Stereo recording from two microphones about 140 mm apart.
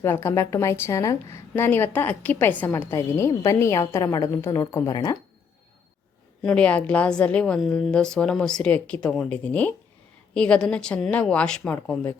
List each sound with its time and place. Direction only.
0.0 s a woman's voice: 20° left (ahead or behind)
6.4 s a woman's voice: 5° left (ahead or behind)